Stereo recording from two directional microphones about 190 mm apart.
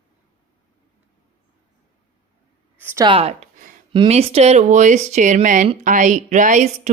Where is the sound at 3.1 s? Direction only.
30° right (ahead or behind).